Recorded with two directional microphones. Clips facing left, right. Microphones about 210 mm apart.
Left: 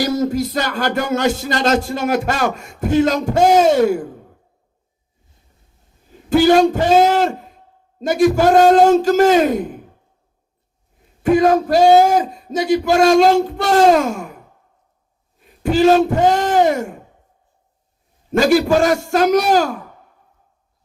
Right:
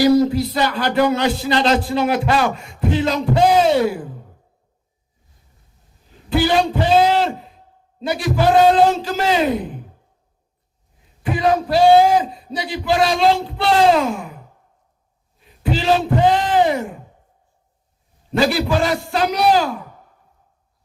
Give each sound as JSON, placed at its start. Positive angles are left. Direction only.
{"t": 0.0, "sound": "music", "side_deg": 45}
{"t": 6.3, "sound": "music", "side_deg": 45}
{"t": 11.2, "sound": "music", "side_deg": 45}
{"t": 15.4, "sound": "speech", "side_deg": 45}
{"t": 18.3, "sound": "music", "side_deg": 45}